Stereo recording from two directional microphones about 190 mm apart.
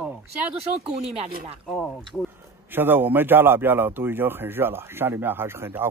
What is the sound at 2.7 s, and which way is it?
Speech, 10° right (ahead or behind).